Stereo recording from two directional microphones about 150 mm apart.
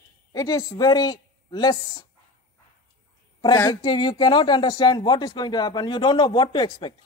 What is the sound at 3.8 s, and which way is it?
A man's voice, 30° left (ahead or behind).